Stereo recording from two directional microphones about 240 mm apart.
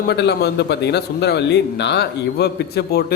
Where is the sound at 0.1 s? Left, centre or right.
Left.